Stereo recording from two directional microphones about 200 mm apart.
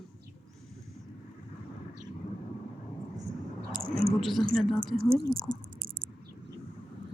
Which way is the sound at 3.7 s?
45° right (ahead or behind).